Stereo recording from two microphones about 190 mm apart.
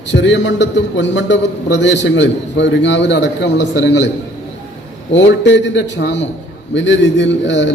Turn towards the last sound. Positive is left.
turn(degrees=70)  # may be behind; listen again after turning